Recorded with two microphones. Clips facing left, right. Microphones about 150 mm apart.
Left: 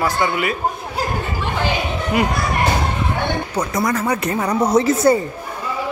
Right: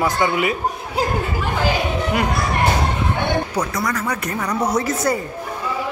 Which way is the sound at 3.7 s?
25° left (ahead or behind).